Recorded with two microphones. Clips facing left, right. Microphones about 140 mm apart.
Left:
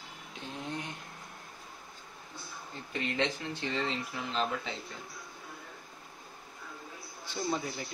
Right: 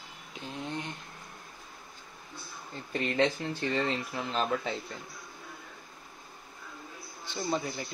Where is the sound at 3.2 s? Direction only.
45° right (ahead or behind).